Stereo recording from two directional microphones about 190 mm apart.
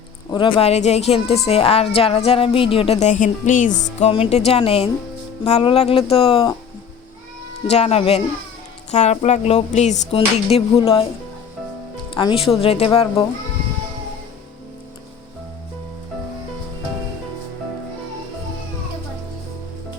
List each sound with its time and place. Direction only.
0.3 s a woman's voice: 25° left (ahead or behind)
7.7 s a woman's voice: 35° left (ahead or behind)
12.1 s a woman's voice: 25° left (ahead or behind)